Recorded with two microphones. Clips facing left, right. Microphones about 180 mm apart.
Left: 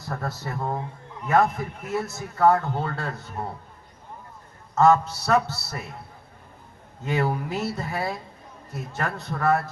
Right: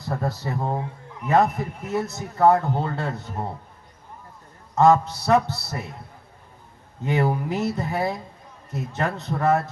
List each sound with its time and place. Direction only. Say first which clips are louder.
0.1 s a man's voice: right 4 dB; 15° right (ahead or behind)
4.7 s a man's voice: right 1 dB; 15° right (ahead or behind)
7.0 s a man's voice: right 2 dB; 20° right (ahead or behind)